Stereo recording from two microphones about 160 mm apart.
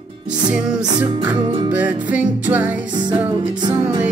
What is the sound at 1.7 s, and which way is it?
Music, 10° right (ahead or behind).